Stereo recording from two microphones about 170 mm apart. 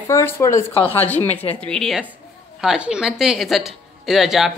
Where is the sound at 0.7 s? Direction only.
35° left (ahead or behind).